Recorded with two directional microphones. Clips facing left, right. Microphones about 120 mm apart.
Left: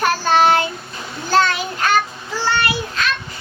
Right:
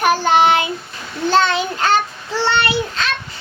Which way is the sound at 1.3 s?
25° right (ahead or behind).